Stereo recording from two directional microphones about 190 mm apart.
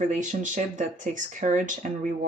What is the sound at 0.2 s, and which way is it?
Speech, 40° right (ahead or behind).